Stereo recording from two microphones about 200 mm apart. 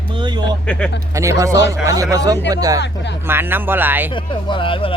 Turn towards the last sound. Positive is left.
turn(degrees=25)  # may be behind; listen again after turning